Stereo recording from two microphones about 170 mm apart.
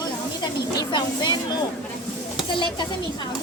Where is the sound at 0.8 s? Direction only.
25° left (ahead or behind).